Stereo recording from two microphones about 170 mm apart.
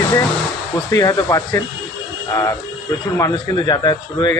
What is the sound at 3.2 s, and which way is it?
A man's voice, 20° left (ahead or behind).